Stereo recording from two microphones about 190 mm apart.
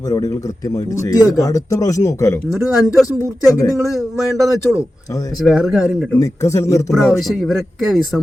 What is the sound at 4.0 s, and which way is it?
Speech, centre (ahead or behind).